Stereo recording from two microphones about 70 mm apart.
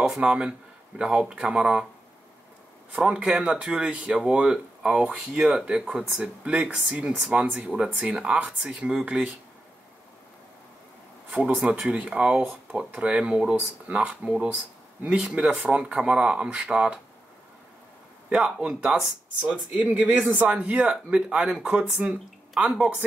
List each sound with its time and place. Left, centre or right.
0.0 s speech: centre
2.9 s speech: centre
11.2 s speech: centre
18.3 s speech: centre